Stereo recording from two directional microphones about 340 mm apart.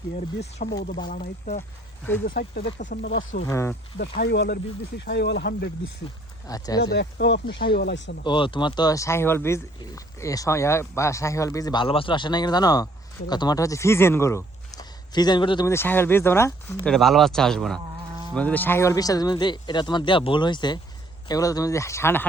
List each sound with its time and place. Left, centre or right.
0.2 s speech: left
3.3 s speech: centre
4.2 s speech: left
6.5 s speech: centre
6.9 s speech: left
8.2 s speech: centre